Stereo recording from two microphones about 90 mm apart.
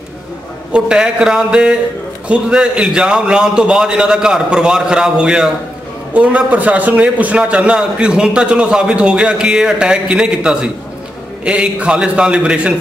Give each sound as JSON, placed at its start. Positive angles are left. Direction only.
{"t": 0.7, "sound": "a man's voice", "side_deg": -10}